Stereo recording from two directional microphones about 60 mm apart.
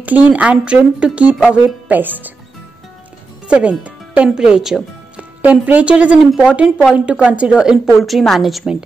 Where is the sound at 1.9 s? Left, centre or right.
Right.